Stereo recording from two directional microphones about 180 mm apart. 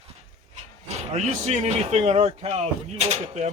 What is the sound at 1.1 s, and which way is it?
Speech, 40° right (ahead or behind).